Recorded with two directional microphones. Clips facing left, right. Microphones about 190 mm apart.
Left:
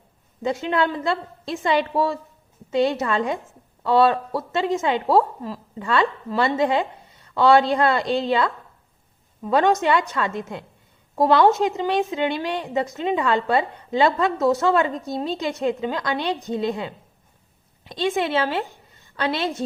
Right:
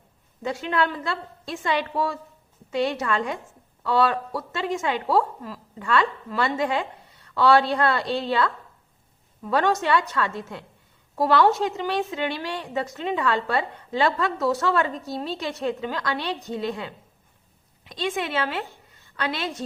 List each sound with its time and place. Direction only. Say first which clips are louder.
0.4 s a woman's voice: left 3 dB; 20° left (ahead or behind)
17.9 s a woman's voice: left 5 dB; 25° left (ahead or behind)